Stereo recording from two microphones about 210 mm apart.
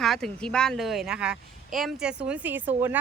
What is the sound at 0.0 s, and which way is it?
Speech, centre (ahead or behind).